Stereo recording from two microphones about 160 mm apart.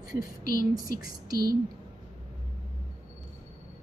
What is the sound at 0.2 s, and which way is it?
Speech, 65° left (ahead or behind).